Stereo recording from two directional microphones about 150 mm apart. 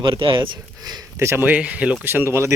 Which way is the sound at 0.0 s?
35° right (ahead or behind).